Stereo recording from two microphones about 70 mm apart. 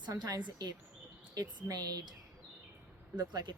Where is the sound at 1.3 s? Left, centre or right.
Right.